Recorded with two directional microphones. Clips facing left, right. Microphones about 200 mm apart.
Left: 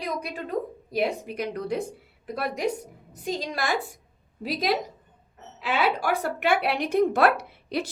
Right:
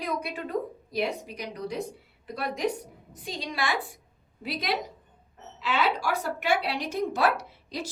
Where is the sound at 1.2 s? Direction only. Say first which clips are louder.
Left 5 dB; 55° left (ahead or behind).